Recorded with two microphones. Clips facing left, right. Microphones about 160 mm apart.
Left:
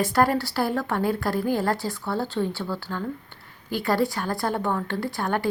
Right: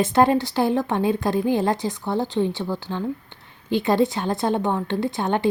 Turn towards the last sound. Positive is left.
turn(degrees=-20)  # may be behind; listen again after turning